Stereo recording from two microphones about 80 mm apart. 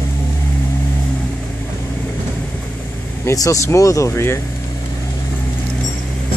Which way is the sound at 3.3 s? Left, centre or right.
Left.